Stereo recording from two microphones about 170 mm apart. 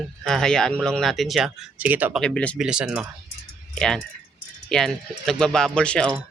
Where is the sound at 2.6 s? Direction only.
5° right (ahead or behind).